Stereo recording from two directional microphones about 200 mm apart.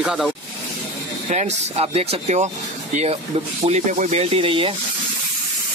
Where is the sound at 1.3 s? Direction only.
35° right (ahead or behind).